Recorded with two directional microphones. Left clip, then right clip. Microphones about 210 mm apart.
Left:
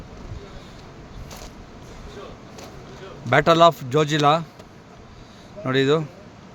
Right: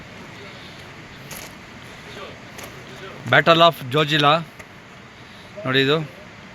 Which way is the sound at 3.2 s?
5° left (ahead or behind).